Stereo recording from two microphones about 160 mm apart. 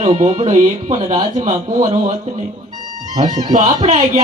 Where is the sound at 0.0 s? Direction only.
45° right (ahead or behind).